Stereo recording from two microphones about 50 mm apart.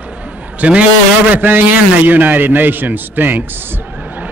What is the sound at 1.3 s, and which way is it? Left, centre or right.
A man's voice, right.